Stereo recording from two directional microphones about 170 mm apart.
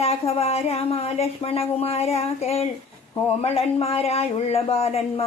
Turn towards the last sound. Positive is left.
turn(degrees=35)  # may be behind; listen again after turning